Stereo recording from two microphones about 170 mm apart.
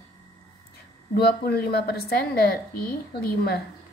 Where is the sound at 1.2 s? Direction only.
70° left (ahead or behind).